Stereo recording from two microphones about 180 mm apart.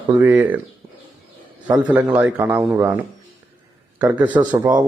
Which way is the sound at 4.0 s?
10° right (ahead or behind).